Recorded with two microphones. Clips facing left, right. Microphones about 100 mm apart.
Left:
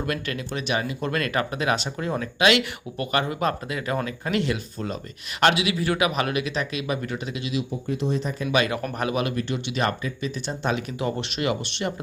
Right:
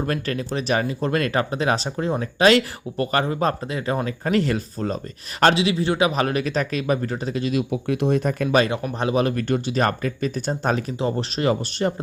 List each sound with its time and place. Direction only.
0.0 s speech: 35° right (ahead or behind)
7.7 s speech: 65° right (ahead or behind)
8.4 s speech: 30° right (ahead or behind)
9.3 s speech: 50° right (ahead or behind)